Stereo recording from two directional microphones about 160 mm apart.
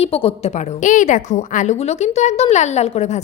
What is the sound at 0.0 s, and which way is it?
A woman's voice, 35° left (ahead or behind).